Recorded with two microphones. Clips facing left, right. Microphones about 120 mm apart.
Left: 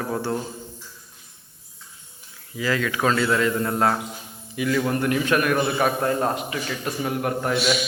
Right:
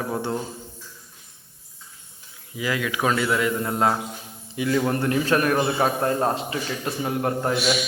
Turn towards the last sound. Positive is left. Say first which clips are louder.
# right 1 dB
turn(degrees=-25)  # may be behind; listen again after turning